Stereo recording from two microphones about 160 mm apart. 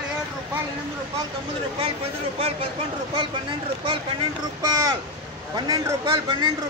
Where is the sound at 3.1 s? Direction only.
30° right (ahead or behind).